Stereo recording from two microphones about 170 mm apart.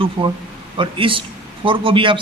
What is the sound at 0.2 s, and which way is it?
A man's voice, 30° right (ahead or behind).